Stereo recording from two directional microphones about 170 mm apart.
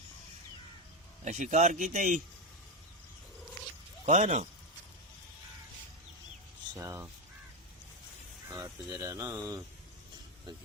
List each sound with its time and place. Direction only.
1.2 s a man's voice: 45° right (ahead or behind)
4.0 s a man's voice: 45° right (ahead or behind)
6.7 s speech: 15° right (ahead or behind)
8.5 s speech: 15° right (ahead or behind)